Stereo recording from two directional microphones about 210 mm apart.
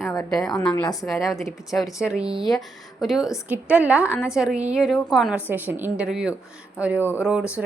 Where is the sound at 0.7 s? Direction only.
15° left (ahead or behind).